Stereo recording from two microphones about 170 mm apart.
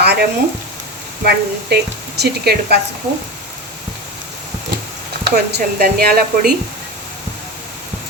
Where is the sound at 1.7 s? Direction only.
70° right (ahead or behind).